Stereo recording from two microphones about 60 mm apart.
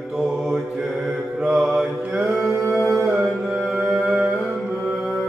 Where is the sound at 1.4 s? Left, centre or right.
Centre.